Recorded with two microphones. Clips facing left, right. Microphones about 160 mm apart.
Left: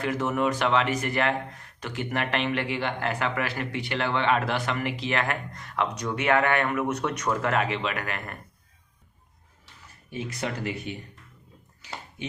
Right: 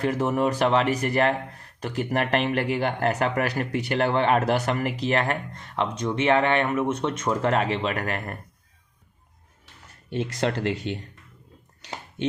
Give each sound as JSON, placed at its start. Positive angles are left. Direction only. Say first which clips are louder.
{"t": 0.0, "sound": "speech", "louder": "right 3 dB", "side_deg": -35}
{"t": 10.1, "sound": "speech", "louder": "right 6 dB", "side_deg": -70}